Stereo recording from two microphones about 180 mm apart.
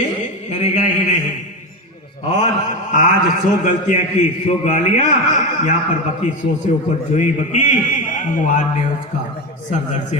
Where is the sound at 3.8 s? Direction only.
45° left (ahead or behind).